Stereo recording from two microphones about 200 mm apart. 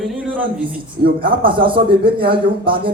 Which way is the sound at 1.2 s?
25° right (ahead or behind).